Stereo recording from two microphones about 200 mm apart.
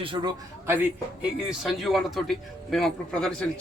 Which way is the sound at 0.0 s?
25° right (ahead or behind).